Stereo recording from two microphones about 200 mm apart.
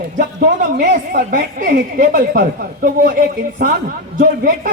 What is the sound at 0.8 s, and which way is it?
Speech, 45° right (ahead or behind).